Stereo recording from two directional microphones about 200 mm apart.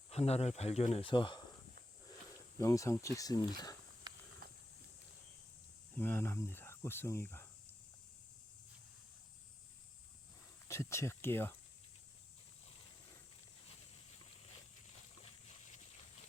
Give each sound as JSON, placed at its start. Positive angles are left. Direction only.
{"t": 0.1, "sound": "speech", "side_deg": 30}
{"t": 2.6, "sound": "speech", "side_deg": 15}
{"t": 4.4, "sound": "a sound", "side_deg": -45}
{"t": 6.0, "sound": "speech", "side_deg": 10}
{"t": 10.7, "sound": "speech", "side_deg": 15}